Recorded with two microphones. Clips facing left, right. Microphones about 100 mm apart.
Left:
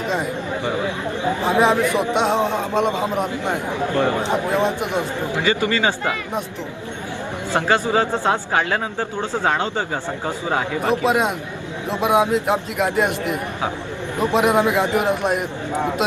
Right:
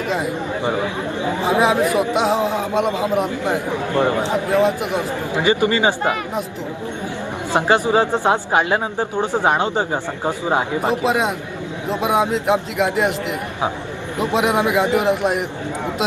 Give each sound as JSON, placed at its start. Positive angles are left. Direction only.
{"t": 1.5, "sound": "a man's voice", "side_deg": -5}
{"t": 3.9, "sound": "speech", "side_deg": -20}
{"t": 4.5, "sound": "a man's voice", "side_deg": 0}
{"t": 5.3, "sound": "speech", "side_deg": -20}
{"t": 7.5, "sound": "speech", "side_deg": -20}
{"t": 11.0, "sound": "a man's voice", "side_deg": 0}
{"t": 14.2, "sound": "a man's voice", "side_deg": 0}